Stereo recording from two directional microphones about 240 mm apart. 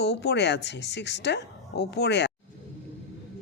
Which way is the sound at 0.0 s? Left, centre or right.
Left.